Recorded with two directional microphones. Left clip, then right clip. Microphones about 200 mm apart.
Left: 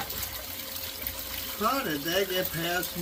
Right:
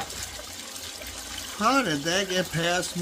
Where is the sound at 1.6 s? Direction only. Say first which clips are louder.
Right 5 dB; 65° right (ahead or behind).